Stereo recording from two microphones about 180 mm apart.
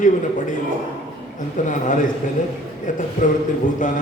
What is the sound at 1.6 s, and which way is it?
A man's voice, 45° left (ahead or behind).